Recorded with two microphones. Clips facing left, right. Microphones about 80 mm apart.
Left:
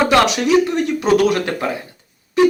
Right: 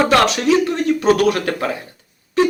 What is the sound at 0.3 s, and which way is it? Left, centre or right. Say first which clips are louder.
Speech: left 1 dB; left.